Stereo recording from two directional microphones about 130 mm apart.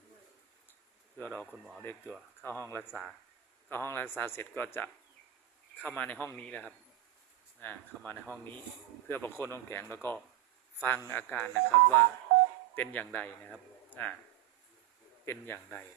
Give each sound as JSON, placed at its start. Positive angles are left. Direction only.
{"t": 1.2, "sound": "speech", "side_deg": 15}
{"t": 1.5, "sound": "speech", "side_deg": 0}
{"t": 1.8, "sound": "speech", "side_deg": 15}
{"t": 2.9, "sound": "speech", "side_deg": 0}
{"t": 3.7, "sound": "speech", "side_deg": 15}
{"t": 15.2, "sound": "speech", "side_deg": 15}